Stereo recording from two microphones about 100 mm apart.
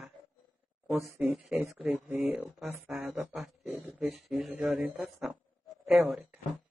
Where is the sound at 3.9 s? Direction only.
Centre (ahead or behind).